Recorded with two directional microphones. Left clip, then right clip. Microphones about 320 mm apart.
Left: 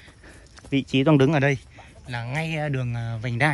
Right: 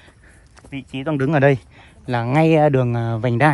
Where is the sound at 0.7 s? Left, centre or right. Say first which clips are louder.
Left 7 dB; centre.